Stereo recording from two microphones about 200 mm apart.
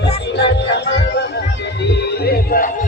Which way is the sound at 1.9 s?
50° left (ahead or behind).